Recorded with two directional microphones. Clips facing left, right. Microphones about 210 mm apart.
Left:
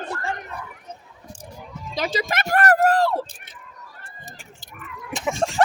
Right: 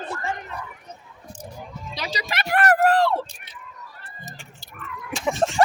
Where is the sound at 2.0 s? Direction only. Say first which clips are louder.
Left 6 dB; 50° left (ahead or behind).